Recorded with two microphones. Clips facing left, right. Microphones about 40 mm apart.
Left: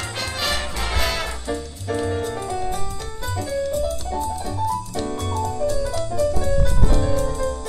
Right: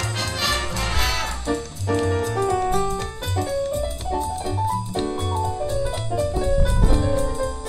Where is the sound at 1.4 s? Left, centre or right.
Right.